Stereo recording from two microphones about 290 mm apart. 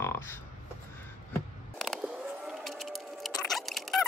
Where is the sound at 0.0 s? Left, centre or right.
Centre.